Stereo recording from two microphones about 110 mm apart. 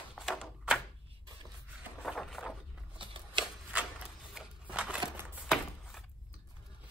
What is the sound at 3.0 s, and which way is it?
Shuffling cards, 50° right (ahead or behind).